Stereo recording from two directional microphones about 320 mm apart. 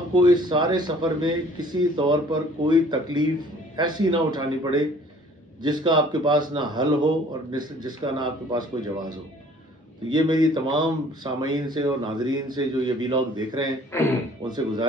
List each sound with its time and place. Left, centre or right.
0.1 s speech: centre
13.9 s a man's voice: centre
14.4 s speech: centre